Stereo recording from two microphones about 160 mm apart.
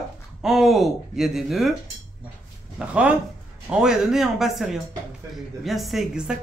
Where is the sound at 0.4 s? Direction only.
Centre (ahead or behind).